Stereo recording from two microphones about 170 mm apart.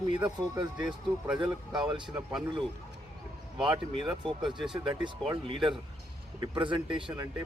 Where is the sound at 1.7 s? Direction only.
25° right (ahead or behind).